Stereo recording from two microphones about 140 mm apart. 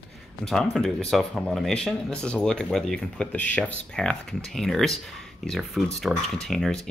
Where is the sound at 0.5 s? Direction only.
Centre (ahead or behind).